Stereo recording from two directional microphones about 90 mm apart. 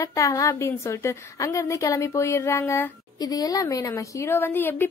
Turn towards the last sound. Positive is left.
turn(degrees=25)  # may be behind; listen again after turning